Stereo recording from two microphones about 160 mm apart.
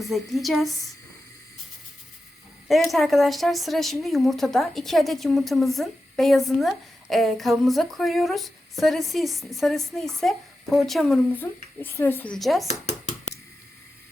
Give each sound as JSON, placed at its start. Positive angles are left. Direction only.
{"t": 0.0, "sound": "speech", "side_deg": 0}
{"t": 2.9, "sound": "speech", "side_deg": 0}
{"t": 11.3, "sound": "speech", "side_deg": 10}
{"t": 12.6, "sound": "a sound", "side_deg": 45}